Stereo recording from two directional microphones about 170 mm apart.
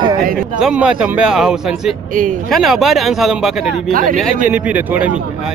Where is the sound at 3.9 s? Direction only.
55° right (ahead or behind).